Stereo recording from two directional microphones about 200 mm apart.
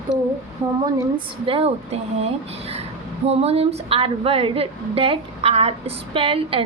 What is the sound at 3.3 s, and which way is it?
A woman's voice, 30° right (ahead or behind).